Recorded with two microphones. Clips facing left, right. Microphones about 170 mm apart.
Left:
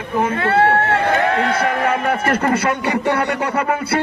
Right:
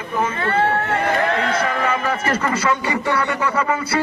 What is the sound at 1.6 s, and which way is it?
A man's voice, 60° left (ahead or behind).